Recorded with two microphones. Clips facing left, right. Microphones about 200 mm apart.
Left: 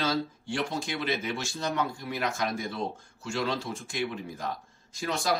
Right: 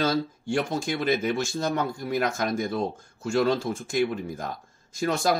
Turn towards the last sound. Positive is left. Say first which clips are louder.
# right 6 dB
turn(degrees=-50)  # may be behind; listen again after turning